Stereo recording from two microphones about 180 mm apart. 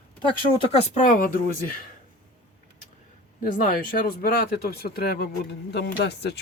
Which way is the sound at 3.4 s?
50° left (ahead or behind).